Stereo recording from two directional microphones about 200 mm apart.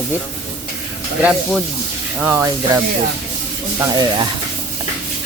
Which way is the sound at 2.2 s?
10° right (ahead or behind).